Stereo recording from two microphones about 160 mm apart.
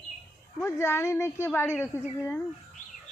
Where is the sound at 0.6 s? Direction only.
15° left (ahead or behind).